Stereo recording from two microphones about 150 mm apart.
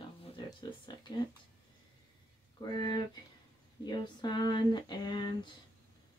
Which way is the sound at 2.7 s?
30° left (ahead or behind).